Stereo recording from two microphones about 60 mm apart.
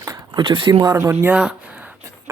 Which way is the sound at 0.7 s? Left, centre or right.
Right.